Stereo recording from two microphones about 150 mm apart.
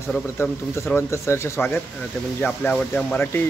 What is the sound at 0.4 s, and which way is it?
Speech, 15° left (ahead or behind).